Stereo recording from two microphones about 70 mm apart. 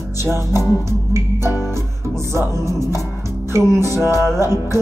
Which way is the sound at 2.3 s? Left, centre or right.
Right.